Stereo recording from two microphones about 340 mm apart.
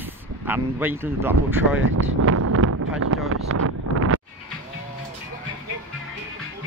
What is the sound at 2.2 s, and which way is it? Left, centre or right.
Wind noise, right.